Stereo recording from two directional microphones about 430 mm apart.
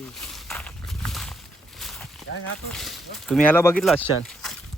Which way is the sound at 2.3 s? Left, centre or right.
Left.